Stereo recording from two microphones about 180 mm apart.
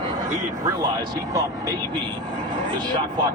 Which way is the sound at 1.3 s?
20° right (ahead or behind).